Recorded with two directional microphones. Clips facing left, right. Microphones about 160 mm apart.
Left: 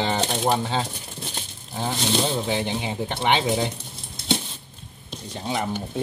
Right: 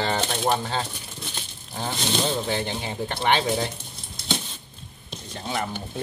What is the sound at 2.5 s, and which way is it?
Speech, 15° left (ahead or behind).